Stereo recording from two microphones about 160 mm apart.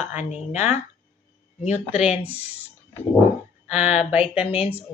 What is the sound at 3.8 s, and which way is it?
Speech, 40° left (ahead or behind).